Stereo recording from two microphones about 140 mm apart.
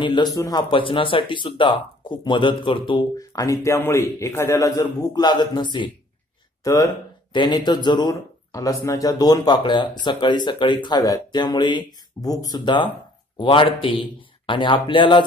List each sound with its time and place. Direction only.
0.0 s speech: 30° left (ahead or behind)